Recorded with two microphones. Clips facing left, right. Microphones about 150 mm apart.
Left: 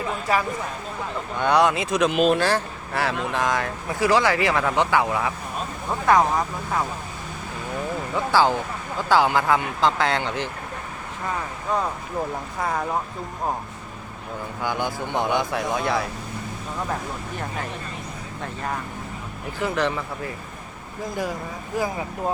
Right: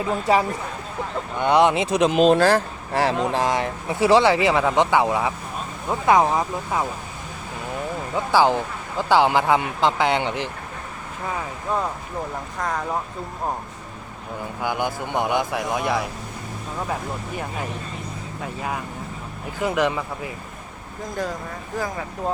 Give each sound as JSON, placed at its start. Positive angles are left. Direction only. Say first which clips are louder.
{"t": 0.1, "sound": "speech", "louder": "right 5 dB", "side_deg": -25}
{"t": 8.1, "sound": "speech", "louder": "right 2 dB", "side_deg": -15}
{"t": 11.7, "sound": "speech", "louder": "left 1 dB", "side_deg": -5}
{"t": 14.6, "sound": "speech", "louder": "right 1 dB", "side_deg": -15}
{"t": 18.4, "sound": "speech", "louder": "right 1 dB", "side_deg": -5}